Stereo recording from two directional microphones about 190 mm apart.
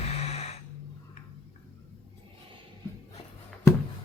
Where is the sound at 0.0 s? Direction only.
35° left (ahead or behind).